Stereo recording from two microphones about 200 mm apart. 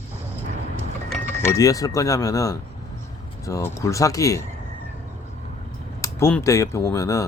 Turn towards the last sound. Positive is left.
turn(degrees=15)  # may be behind; listen again after turning